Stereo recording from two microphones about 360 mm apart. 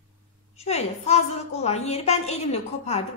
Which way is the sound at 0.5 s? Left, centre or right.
Centre.